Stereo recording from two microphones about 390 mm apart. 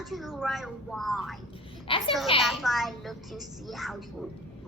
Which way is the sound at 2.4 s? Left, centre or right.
Centre.